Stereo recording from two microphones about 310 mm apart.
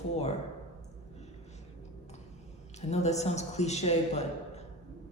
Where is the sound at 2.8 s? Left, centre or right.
Left.